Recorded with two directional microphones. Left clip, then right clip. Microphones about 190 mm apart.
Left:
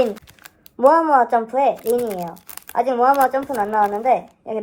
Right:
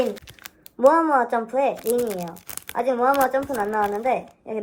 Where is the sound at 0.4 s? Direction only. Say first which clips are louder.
Left 2 dB; 5° right (ahead or behind).